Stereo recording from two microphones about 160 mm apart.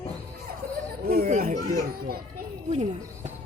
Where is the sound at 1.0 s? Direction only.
65° right (ahead or behind).